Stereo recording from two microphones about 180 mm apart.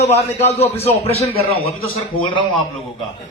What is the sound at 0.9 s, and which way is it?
Speech, 35° left (ahead or behind).